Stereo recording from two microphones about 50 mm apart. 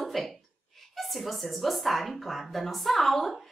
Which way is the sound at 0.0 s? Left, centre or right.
Centre.